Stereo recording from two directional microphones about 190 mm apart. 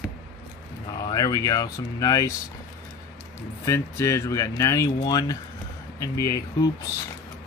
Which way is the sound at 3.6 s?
15° left (ahead or behind).